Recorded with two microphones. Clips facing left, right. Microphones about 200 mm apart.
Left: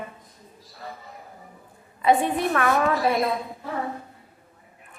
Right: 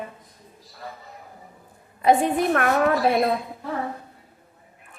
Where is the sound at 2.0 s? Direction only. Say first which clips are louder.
Right 2 dB; 50° right (ahead or behind).